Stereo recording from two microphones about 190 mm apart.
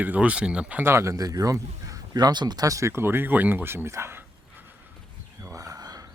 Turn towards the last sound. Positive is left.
turn(degrees=-20)  # may be behind; listen again after turning